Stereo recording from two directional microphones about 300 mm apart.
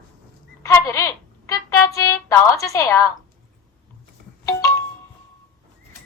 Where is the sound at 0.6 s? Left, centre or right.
Centre.